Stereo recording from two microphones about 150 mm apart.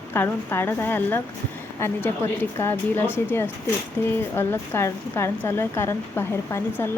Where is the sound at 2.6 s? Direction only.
15° left (ahead or behind).